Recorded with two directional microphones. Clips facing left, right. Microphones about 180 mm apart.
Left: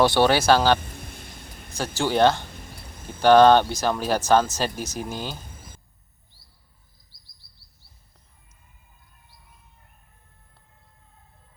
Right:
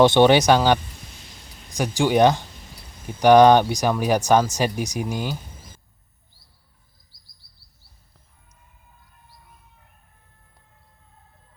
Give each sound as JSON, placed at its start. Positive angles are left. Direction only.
{"t": 0.0, "sound": "speech", "side_deg": -20}
{"t": 0.8, "sound": "a sound", "side_deg": 55}
{"t": 1.7, "sound": "speech", "side_deg": -15}